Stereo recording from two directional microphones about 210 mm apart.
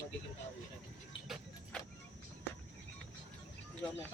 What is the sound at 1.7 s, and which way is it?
Vehicle, 5° left (ahead or behind).